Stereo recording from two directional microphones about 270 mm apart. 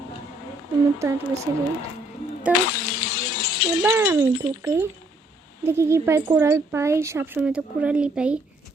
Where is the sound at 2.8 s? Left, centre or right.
Left.